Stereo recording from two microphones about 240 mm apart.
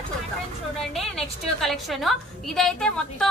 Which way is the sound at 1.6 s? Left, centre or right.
Centre.